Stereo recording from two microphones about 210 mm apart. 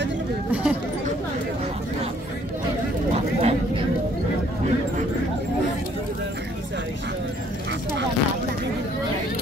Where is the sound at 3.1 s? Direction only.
30° right (ahead or behind).